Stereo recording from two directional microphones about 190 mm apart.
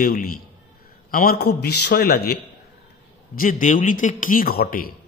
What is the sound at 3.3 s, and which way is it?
A man's voice, 45° left (ahead or behind).